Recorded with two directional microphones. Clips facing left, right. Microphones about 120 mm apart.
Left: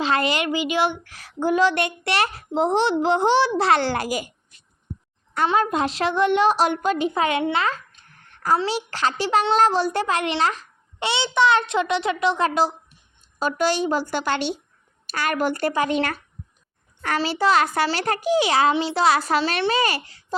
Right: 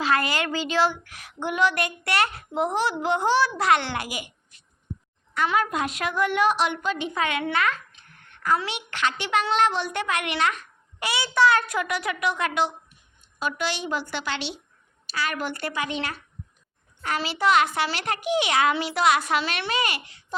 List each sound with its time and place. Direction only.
0.0 s speech: 25° left (ahead or behind)
1.0 s a child's voice: 30° left (ahead or behind)
5.3 s a woman's voice: 30° left (ahead or behind)